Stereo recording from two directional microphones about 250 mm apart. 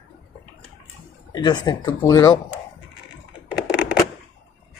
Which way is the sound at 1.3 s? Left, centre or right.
Centre.